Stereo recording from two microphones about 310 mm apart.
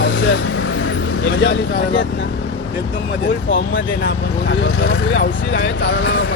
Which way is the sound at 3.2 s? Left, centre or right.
Left.